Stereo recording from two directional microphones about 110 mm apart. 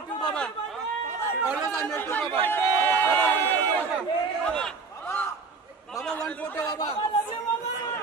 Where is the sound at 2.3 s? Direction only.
20° left (ahead or behind).